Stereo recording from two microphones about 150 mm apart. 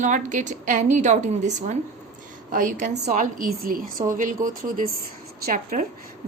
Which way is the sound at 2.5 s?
60° right (ahead or behind).